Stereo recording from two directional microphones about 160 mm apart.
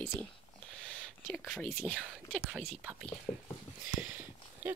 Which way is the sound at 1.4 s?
5° left (ahead or behind).